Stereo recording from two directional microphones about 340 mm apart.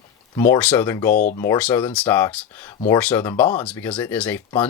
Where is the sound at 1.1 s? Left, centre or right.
Left.